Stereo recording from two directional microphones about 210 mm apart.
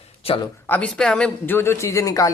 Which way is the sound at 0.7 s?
5° left (ahead or behind).